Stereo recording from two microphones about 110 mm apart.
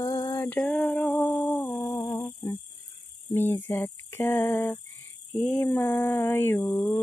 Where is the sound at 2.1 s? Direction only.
25° left (ahead or behind).